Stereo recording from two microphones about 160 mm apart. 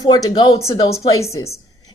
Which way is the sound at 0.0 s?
25° left (ahead or behind).